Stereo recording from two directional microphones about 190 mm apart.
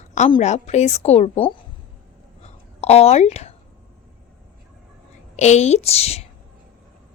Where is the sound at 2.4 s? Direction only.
35° left (ahead or behind).